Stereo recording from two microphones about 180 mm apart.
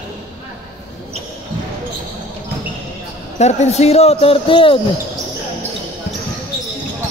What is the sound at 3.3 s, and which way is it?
Speech, 40° left (ahead or behind).